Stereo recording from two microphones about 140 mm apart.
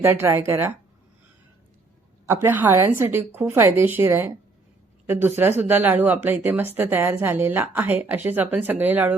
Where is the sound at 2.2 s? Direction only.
15° right (ahead or behind).